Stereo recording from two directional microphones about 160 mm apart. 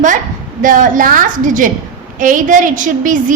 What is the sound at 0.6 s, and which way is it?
A woman's voice, 55° right (ahead or behind).